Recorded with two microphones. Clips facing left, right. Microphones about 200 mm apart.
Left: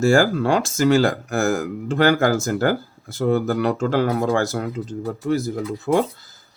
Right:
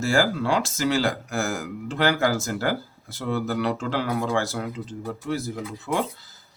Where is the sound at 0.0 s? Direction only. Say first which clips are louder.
Left 6 dB; 45° left (ahead or behind).